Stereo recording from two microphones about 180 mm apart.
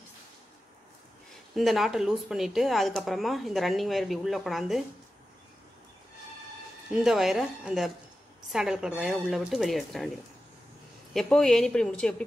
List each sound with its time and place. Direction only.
1.5 s speech: centre (ahead or behind)
6.9 s speech: 5° right (ahead or behind)
11.1 s speech: 5° left (ahead or behind)